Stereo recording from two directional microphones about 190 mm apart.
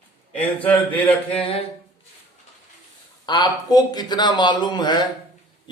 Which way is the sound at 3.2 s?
20° left (ahead or behind).